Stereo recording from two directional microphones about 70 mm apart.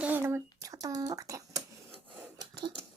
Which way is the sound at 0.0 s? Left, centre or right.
Right.